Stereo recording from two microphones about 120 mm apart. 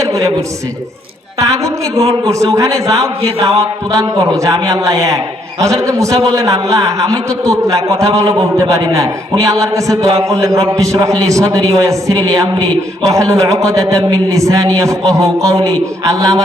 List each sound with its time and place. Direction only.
0.0 s a man's voice: 25° right (ahead or behind)
1.4 s a man's voice: 25° right (ahead or behind)
3.2 s music: 50° right (ahead or behind)
3.6 s a man's voice: 30° right (ahead or behind)